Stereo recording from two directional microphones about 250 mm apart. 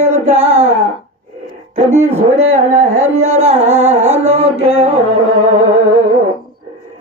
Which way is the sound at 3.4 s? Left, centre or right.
Right.